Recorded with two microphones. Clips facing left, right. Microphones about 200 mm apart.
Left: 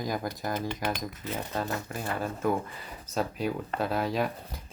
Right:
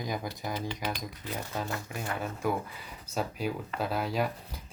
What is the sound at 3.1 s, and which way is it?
Speech, centre (ahead or behind).